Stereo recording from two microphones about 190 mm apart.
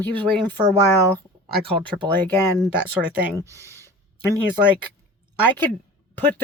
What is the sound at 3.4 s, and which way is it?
Speech, 15° right (ahead or behind).